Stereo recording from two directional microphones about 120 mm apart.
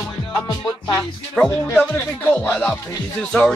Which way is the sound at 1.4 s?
20° left (ahead or behind).